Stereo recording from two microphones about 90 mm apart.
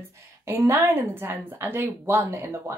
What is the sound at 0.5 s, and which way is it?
A woman's voice, 30° right (ahead or behind).